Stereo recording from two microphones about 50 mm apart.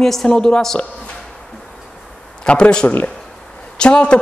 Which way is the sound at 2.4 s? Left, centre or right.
Centre.